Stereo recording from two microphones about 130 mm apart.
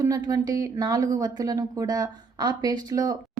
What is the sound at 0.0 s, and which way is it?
A woman's voice, 25° right (ahead or behind).